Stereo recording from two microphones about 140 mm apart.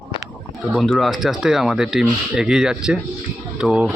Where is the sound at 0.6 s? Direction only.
Centre (ahead or behind).